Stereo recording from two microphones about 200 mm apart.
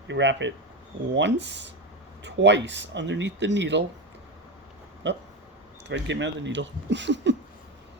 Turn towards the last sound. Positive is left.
turn(degrees=-60)  # may be behind; listen again after turning